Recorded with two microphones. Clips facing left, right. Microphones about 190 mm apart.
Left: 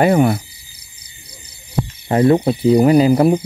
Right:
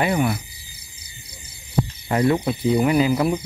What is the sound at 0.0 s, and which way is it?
Cricket, 45° left (ahead or behind).